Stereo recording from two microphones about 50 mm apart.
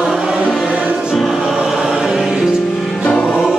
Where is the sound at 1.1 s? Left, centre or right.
Centre.